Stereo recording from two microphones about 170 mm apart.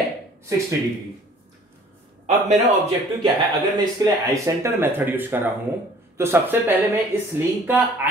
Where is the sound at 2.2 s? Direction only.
45° right (ahead or behind).